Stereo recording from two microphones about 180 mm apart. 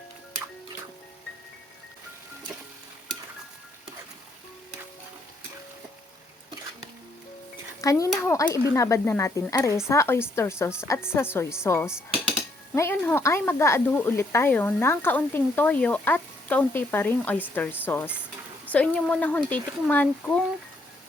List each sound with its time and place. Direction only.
7.8 s speech: 20° left (ahead or behind)